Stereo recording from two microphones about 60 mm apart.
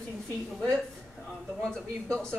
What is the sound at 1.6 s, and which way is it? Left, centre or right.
Speech, centre.